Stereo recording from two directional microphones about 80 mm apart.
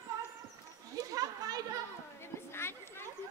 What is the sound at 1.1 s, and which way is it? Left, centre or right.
Children playing, right.